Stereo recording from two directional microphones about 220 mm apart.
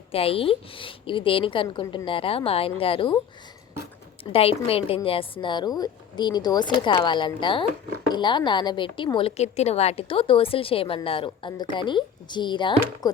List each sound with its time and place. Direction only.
0.1 s a woman's voice: 25° left (ahead or behind)
4.2 s a woman's voice: 25° left (ahead or behind)